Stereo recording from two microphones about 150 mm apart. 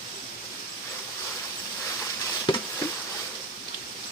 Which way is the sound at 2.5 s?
30° left (ahead or behind).